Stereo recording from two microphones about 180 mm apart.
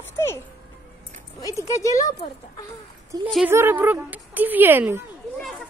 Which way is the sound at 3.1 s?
20° right (ahead or behind).